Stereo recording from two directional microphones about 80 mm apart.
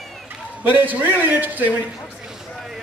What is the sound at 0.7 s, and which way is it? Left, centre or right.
A man's voice, right.